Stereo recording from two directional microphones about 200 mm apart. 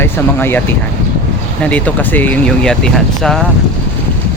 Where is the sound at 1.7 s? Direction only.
5° left (ahead or behind).